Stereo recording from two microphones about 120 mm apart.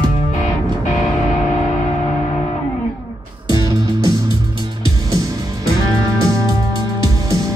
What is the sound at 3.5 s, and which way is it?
Music, 30° right (ahead or behind).